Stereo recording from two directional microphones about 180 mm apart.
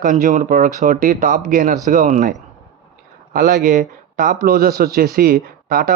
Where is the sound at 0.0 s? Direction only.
45° right (ahead or behind).